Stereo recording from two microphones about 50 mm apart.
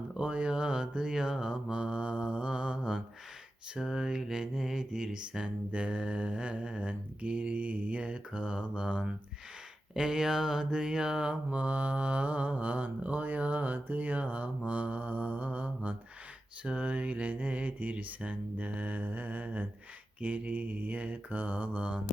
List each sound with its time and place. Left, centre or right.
0.2 s mantra: centre
1.7 s mantra: right
9.9 s mantra: centre
11.5 s mantra: right